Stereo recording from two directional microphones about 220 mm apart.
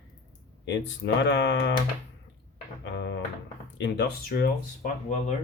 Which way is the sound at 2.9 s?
50° left (ahead or behind).